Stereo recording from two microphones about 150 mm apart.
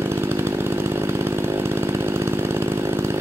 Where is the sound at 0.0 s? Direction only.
15° right (ahead or behind).